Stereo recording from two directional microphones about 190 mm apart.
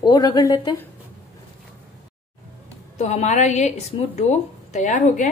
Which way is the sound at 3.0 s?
35° left (ahead or behind).